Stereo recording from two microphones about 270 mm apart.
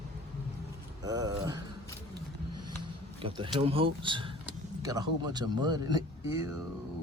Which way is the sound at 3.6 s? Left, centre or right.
Right.